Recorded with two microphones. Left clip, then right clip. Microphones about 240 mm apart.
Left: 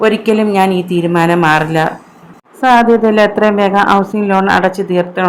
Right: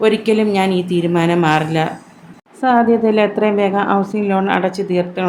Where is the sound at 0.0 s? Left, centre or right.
Centre.